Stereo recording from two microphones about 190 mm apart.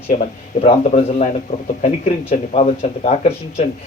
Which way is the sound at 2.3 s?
40° left (ahead or behind).